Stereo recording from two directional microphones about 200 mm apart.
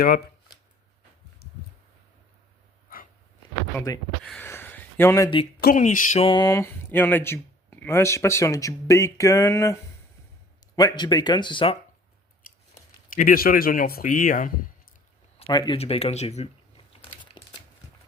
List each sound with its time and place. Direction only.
3.8 s speech: 15° left (ahead or behind)
4.2 s speech: centre (ahead or behind)
4.4 s a sound: 10° left (ahead or behind)
5.5 s speech: 45° left (ahead or behind); by 9.7 s 15° left (ahead or behind)
10.8 s speech: 20° left (ahead or behind)
12.4 s scissors: 45° left (ahead or behind)
13.1 s speech: 45° left (ahead or behind)
15.4 s speech: 20° left (ahead or behind)